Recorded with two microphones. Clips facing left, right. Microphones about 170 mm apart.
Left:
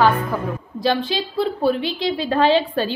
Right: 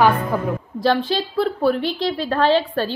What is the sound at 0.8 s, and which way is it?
A woman's voice, 15° left (ahead or behind).